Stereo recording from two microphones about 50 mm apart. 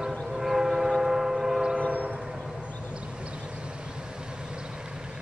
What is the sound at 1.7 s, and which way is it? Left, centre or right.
Train, right.